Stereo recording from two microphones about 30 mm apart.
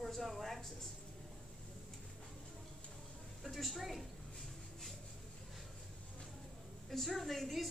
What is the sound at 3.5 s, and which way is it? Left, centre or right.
Speech, centre.